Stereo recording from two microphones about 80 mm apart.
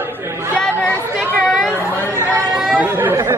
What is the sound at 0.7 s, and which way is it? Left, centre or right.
Chatter, left.